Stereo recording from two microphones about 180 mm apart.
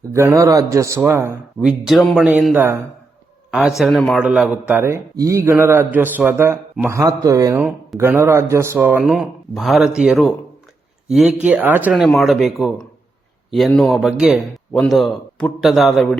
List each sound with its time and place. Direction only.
0.1 s a man's voice: 15° right (ahead or behind); by 16.0 s centre (ahead or behind)